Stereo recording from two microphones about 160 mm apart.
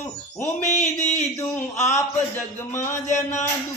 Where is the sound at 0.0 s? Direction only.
15° left (ahead or behind).